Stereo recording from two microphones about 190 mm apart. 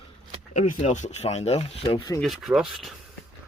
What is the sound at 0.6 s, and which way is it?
Speech, 40° left (ahead or behind).